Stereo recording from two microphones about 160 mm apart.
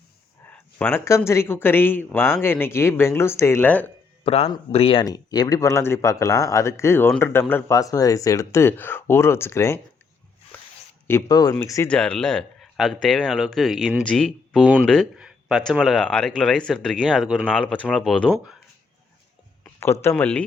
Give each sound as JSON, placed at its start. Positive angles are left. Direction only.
{"t": 0.5, "sound": "speech", "side_deg": 10}
{"t": 4.2, "sound": "speech", "side_deg": 40}
{"t": 5.0, "sound": "speech", "side_deg": 25}
{"t": 11.1, "sound": "speech", "side_deg": 25}
{"t": 11.9, "sound": "speech", "side_deg": 5}
{"t": 19.6, "sound": "speech", "side_deg": 15}